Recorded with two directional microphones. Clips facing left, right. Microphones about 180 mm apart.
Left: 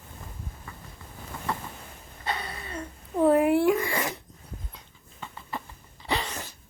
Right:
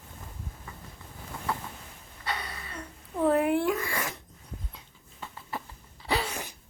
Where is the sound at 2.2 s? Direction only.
25° left (ahead or behind).